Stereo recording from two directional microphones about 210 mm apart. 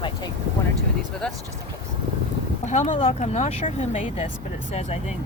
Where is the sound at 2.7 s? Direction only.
35° left (ahead or behind).